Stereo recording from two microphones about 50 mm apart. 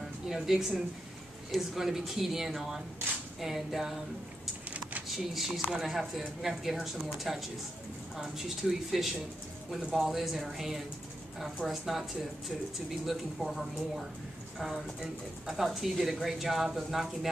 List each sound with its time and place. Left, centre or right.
0.3 s speech: centre
4.6 s a sound: right
5.0 s speech: centre